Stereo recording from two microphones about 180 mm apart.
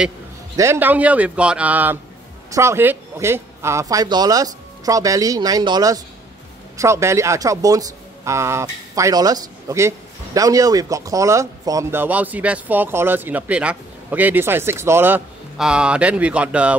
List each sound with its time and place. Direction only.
0.6 s speech: 10° right (ahead or behind)